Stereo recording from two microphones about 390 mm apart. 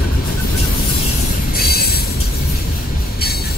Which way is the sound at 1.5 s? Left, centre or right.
Left.